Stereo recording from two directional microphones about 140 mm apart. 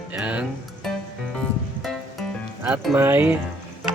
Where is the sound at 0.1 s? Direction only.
10° right (ahead or behind).